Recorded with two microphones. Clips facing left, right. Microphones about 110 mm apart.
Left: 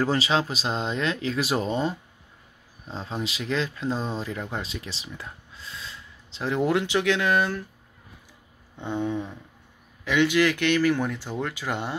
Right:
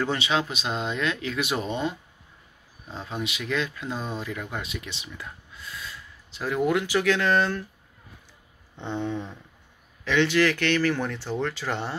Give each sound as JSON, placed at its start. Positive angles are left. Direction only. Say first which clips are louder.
{"t": 0.0, "sound": "speech", "louder": "left 2 dB", "side_deg": 35}
{"t": 8.7, "sound": "speech", "louder": "left 2 dB", "side_deg": 10}